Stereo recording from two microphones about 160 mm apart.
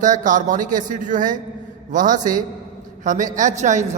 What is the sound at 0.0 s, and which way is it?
A man's voice, 50° right (ahead or behind).